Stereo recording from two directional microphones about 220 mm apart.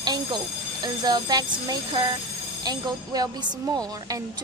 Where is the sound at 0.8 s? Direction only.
20° right (ahead or behind).